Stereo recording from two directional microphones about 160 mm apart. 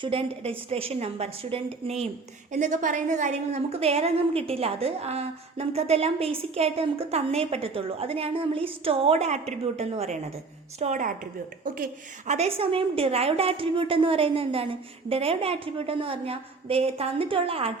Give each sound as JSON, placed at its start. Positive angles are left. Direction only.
{"t": 0.0, "sound": "a woman's voice", "side_deg": -35}
{"t": 2.5, "sound": "a woman's voice", "side_deg": -50}
{"t": 11.6, "sound": "speech", "side_deg": -60}
{"t": 12.3, "sound": "a woman's voice", "side_deg": -40}